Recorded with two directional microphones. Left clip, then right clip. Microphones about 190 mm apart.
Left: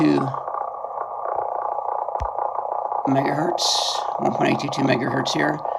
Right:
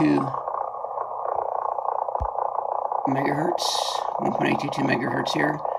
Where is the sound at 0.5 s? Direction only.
55° left (ahead or behind).